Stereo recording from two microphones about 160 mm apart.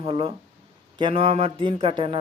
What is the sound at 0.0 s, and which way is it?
A man's voice, 35° right (ahead or behind).